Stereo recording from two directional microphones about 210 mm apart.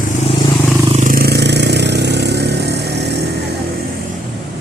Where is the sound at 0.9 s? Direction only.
40° right (ahead or behind).